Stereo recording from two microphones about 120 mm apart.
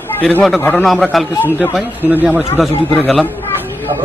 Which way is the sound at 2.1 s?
15° right (ahead or behind).